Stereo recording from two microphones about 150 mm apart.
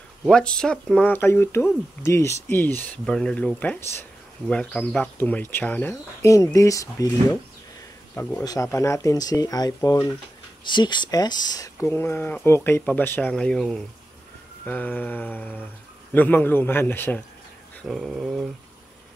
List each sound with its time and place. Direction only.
0.3 s speech: 5° left (ahead or behind); by 7.1 s 20° left (ahead or behind)
8.2 s speech: 10° left (ahead or behind)
8.5 s speech: 20° left (ahead or behind)
17.8 s a sound: centre (ahead or behind)